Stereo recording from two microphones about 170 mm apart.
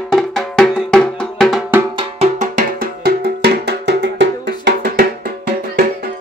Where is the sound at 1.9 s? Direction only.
40° right (ahead or behind); by 5.1 s 90° right.